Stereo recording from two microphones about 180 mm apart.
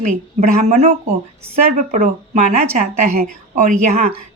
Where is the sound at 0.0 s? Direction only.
40° right (ahead or behind).